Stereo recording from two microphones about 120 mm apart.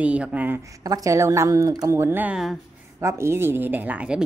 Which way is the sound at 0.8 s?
30° right (ahead or behind).